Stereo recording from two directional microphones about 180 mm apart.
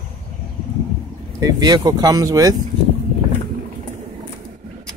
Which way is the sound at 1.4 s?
25° right (ahead or behind).